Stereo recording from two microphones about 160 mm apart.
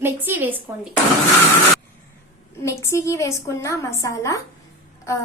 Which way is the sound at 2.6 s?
20° left (ahead or behind).